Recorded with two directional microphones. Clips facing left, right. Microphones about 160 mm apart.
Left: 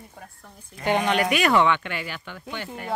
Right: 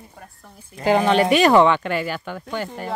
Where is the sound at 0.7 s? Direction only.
30° right (ahead or behind).